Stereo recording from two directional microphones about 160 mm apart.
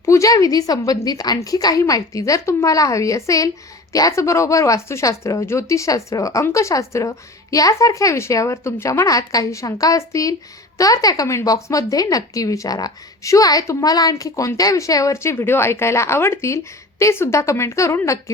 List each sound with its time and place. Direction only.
0.0 s a woman's voice: 20° left (ahead or behind)